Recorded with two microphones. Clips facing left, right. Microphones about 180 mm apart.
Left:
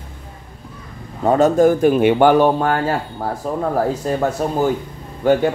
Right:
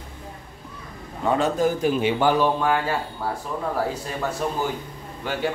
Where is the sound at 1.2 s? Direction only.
45° left (ahead or behind).